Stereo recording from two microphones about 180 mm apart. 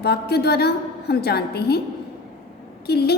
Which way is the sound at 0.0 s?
60° left (ahead or behind).